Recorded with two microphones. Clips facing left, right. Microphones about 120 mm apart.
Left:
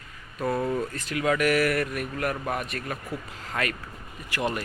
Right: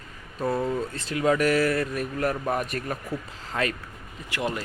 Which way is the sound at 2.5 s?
40° right (ahead or behind).